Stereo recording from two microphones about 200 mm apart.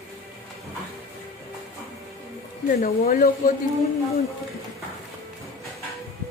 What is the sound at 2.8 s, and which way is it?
Speech, 45° left (ahead or behind).